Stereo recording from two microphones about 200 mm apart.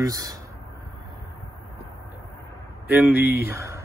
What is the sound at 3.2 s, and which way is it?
Speech, 50° left (ahead or behind).